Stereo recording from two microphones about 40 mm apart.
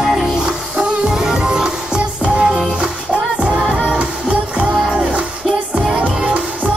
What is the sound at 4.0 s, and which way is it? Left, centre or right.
Music, right.